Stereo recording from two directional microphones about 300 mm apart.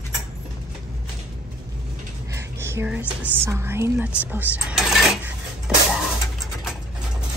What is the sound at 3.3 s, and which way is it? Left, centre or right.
Speech, centre.